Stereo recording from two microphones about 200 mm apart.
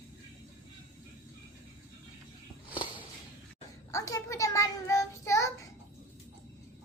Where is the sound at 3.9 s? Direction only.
15° left (ahead or behind).